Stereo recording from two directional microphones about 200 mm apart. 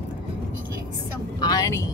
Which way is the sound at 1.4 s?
15° left (ahead or behind).